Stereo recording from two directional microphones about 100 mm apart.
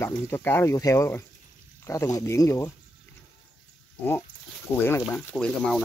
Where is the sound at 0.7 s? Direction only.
35° left (ahead or behind).